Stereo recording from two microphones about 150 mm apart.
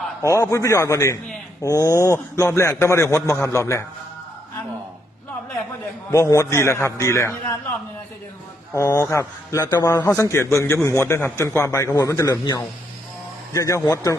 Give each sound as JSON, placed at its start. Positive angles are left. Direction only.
{"t": 0.2, "sound": "a man's voice", "side_deg": 20}
{"t": 6.1, "sound": "a man's voice", "side_deg": 20}
{"t": 8.7, "sound": "a man's voice", "side_deg": 20}